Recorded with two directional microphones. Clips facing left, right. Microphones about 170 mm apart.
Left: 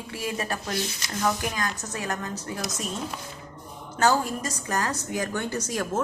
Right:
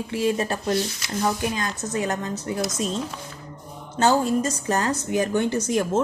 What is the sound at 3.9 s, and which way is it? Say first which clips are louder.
A woman's voice: right 4 dB; 25° right (ahead or behind).